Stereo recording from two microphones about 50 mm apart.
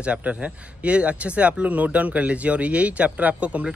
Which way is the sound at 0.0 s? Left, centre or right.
Right.